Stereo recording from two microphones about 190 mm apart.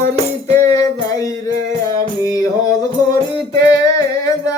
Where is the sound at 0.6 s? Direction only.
15° left (ahead or behind).